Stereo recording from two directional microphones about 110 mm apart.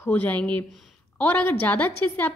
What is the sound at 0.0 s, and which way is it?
A woman's voice, 15° left (ahead or behind).